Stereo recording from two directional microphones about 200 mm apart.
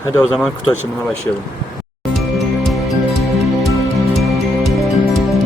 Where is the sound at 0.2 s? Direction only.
Centre (ahead or behind).